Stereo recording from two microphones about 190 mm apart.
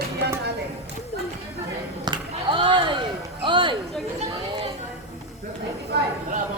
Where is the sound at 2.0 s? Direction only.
25° right (ahead or behind).